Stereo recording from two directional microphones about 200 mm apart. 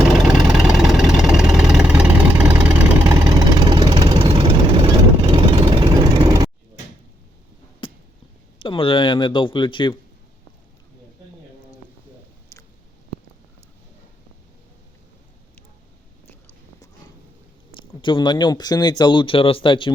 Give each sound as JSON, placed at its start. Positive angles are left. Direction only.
{"t": 0.0, "sound": "vehicle", "side_deg": 0}
{"t": 4.2, "sound": "engine", "side_deg": -25}
{"t": 7.8, "sound": "a sound", "side_deg": 25}
{"t": 8.5, "sound": "a man's voice", "side_deg": 25}
{"t": 17.7, "sound": "speech", "side_deg": 25}